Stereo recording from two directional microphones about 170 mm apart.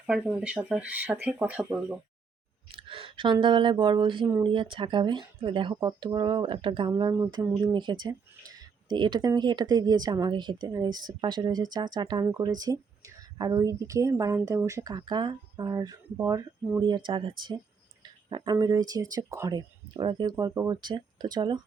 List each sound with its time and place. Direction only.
0.1 s speech: 5° right (ahead or behind)
2.7 s speech: 30° right (ahead or behind)